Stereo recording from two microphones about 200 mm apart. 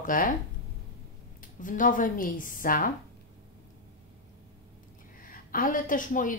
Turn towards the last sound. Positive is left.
turn(degrees=40)  # may be behind; listen again after turning